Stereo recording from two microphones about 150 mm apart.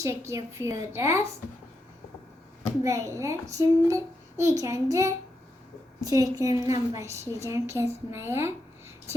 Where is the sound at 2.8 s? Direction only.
20° right (ahead or behind).